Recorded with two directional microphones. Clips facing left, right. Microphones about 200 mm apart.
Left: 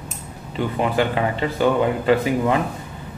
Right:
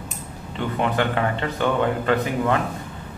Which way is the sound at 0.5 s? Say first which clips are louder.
Left 2 dB; 10° left (ahead or behind).